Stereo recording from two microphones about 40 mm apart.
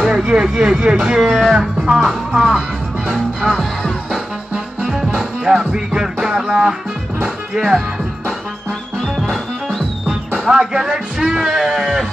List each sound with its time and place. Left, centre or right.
0.0 s speech: centre
1.2 s music: centre
1.5 s speech: centre
2.0 s music: centre
7.5 s speech: centre
9.0 s music: centre
10.5 s speech: centre